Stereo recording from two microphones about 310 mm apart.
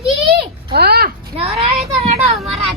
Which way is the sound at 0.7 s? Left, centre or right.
Right.